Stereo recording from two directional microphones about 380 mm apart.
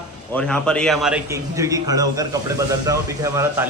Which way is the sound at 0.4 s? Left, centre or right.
Centre.